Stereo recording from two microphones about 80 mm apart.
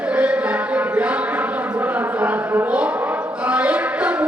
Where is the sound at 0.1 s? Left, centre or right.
Centre.